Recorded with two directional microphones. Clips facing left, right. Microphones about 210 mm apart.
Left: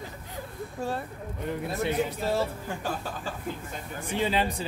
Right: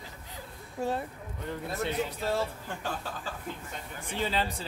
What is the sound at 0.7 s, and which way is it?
Speech, 20° right (ahead or behind).